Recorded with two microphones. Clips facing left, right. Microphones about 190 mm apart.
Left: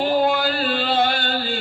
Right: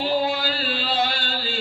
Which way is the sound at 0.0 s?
50° left (ahead or behind).